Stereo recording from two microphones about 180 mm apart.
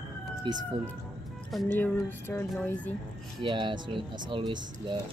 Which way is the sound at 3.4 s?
25° right (ahead or behind).